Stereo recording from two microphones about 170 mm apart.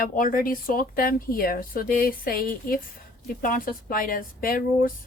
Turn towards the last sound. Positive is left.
turn(degrees=55)  # may be behind; listen again after turning